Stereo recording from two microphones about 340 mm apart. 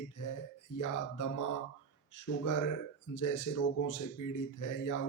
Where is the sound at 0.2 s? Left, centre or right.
Left.